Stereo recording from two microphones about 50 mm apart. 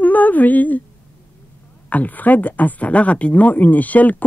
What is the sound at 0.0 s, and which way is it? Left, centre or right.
Humming, left.